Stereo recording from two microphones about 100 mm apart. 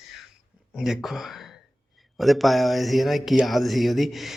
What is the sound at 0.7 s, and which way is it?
Speech, 5° right (ahead or behind).